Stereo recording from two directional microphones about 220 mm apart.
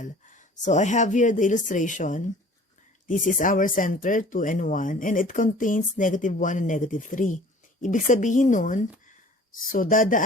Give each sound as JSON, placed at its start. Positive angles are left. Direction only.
{"t": 0.0, "sound": "speech", "side_deg": 35}